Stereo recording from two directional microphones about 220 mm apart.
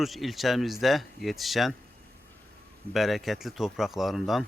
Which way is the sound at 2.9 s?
Centre (ahead or behind).